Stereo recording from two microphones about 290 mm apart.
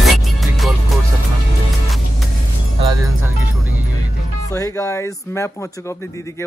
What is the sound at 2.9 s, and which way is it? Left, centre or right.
Music, centre.